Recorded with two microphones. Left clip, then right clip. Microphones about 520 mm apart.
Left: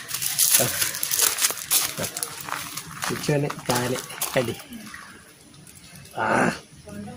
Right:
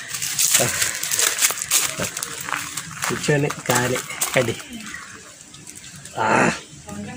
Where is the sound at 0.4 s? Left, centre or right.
Left.